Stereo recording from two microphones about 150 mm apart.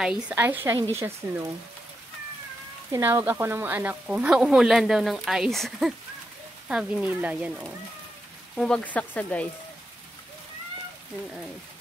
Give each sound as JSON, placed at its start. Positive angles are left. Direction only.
{"t": 0.0, "sound": "speech", "side_deg": -5}
{"t": 2.9, "sound": "speech", "side_deg": -15}
{"t": 8.5, "sound": "speech", "side_deg": 5}